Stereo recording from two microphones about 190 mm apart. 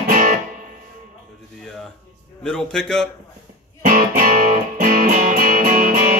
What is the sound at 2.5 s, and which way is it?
Speech, 5° left (ahead or behind).